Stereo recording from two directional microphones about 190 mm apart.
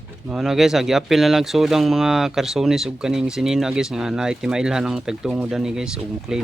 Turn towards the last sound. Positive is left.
turn(degrees=-5)  # may be behind; listen again after turning